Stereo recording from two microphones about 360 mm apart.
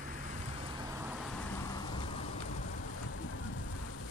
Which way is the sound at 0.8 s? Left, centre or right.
Centre.